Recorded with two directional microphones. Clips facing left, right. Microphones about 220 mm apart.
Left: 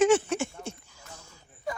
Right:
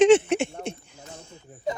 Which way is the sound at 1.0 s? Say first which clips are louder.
Right 7 dB; 25° right (ahead or behind).